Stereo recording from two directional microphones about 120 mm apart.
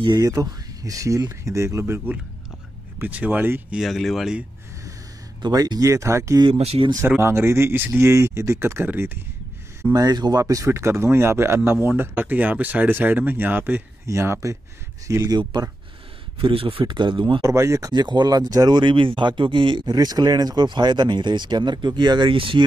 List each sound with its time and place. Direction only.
0.0 s speech: 35° right (ahead or behind); by 3.6 s 15° right (ahead or behind)
3.7 s speech: centre (ahead or behind)
5.4 s speech: 35° right (ahead or behind)
6.6 s speech: 55° right (ahead or behind)
7.1 s speech: 20° right (ahead or behind)
9.9 s speech: 35° right (ahead or behind)
16.3 s speech: 50° right (ahead or behind)
17.4 s speech: 25° right (ahead or behind); by 22.7 s 45° right (ahead or behind)